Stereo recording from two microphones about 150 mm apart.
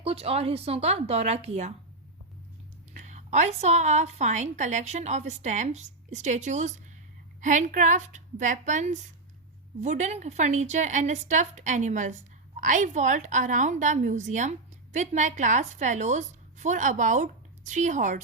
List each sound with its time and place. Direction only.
0.0 s a woman's voice: 40° right (ahead or behind)
2.9 s a woman's voice: 55° right (ahead or behind)